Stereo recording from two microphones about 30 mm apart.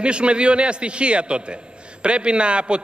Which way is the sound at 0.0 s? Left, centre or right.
Right.